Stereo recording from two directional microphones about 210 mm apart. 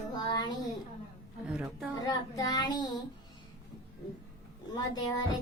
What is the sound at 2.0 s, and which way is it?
Child singing, 20° left (ahead or behind).